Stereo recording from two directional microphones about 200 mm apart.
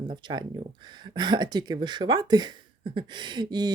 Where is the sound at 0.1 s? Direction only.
20° right (ahead or behind).